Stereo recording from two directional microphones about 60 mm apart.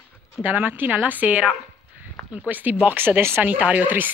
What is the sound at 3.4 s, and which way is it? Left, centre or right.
Speech, right.